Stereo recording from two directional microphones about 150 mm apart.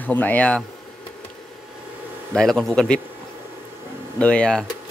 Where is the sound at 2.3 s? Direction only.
5° left (ahead or behind).